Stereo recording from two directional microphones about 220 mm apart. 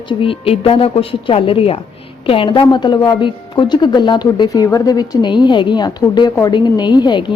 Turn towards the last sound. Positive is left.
turn(degrees=20)  # may be behind; listen again after turning